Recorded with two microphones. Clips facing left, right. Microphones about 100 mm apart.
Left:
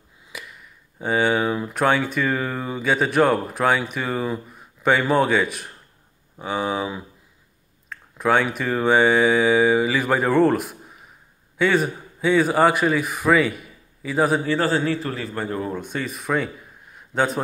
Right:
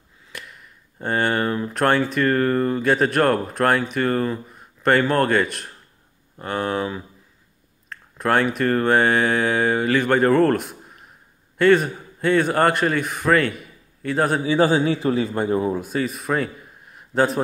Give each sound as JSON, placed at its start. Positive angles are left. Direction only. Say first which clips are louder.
{"t": 0.3, "sound": "speech", "louder": "even", "side_deg": 5}
{"t": 7.9, "sound": "a sound", "louder": "left 1 dB", "side_deg": 0}
{"t": 8.5, "sound": "a man's voice", "louder": "right 1 dB", "side_deg": 0}
{"t": 14.5, "sound": "speech", "louder": "right 3 dB", "side_deg": -15}
{"t": 15.8, "sound": "speech", "louder": "right 4 dB", "side_deg": 0}
{"t": 16.9, "sound": "a sound", "louder": "right 2 dB", "side_deg": 0}